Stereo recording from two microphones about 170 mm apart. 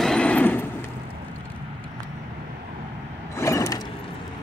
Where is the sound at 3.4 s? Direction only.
20° left (ahead or behind).